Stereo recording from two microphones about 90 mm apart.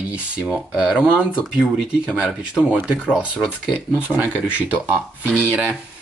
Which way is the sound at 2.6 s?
Centre (ahead or behind).